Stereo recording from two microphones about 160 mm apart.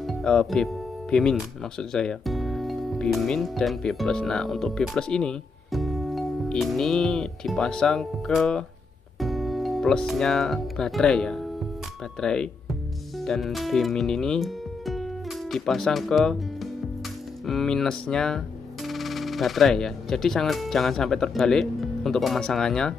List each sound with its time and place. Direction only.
0.0 s speech: 5° left (ahead or behind)